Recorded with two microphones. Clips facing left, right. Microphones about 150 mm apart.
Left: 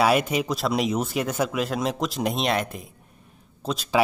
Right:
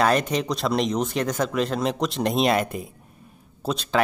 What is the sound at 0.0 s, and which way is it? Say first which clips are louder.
Speech: even; 5° left (ahead or behind).